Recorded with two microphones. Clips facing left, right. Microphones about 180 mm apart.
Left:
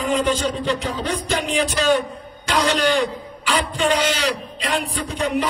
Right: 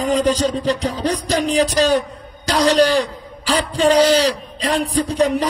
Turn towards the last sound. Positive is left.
turn(degrees=-35)  # may be behind; listen again after turning